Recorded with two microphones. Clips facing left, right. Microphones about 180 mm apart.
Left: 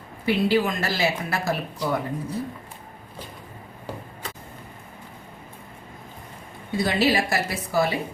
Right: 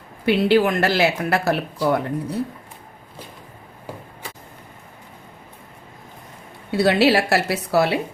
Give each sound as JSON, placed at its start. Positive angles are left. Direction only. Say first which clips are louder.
{"t": 0.3, "sound": "speech", "louder": "right 5 dB", "side_deg": -70}
{"t": 6.7, "sound": "speech", "louder": "right 6 dB", "side_deg": -70}